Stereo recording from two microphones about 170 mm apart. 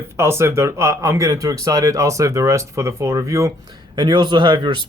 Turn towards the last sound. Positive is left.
turn(degrees=-25)  # may be behind; listen again after turning